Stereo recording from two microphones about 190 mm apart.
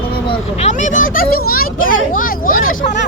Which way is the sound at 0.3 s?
35° left (ahead or behind).